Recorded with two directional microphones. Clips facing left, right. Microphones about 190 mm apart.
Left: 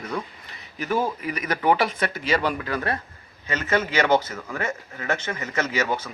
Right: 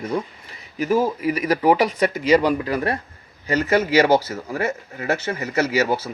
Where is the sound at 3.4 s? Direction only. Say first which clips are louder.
Right 5 dB; 35° right (ahead or behind).